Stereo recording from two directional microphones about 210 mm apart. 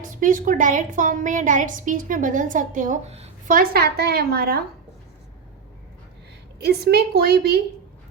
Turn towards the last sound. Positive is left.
turn(degrees=-50)  # may be behind; listen again after turning